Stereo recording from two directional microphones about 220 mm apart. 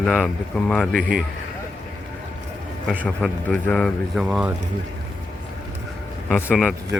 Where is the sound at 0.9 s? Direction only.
40° right (ahead or behind).